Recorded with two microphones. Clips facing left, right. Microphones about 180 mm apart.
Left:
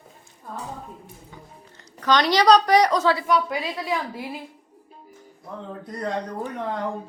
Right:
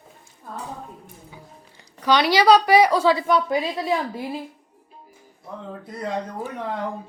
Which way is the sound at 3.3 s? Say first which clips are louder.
Right 2 dB; 30° right (ahead or behind).